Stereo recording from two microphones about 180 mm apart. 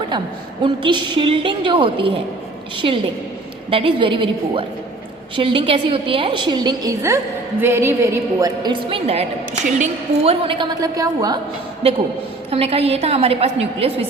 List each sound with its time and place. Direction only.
0.6 s a woman's voice: 25° right (ahead or behind)
12.5 s a woman's voice: 35° right (ahead or behind)